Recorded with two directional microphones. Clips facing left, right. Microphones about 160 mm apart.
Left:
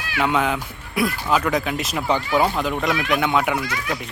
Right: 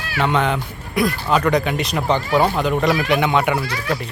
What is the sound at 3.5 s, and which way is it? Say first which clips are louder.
Speech: right 2 dB; 30° right (ahead or behind).